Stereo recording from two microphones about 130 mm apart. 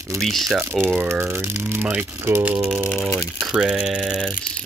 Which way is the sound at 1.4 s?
20° right (ahead or behind).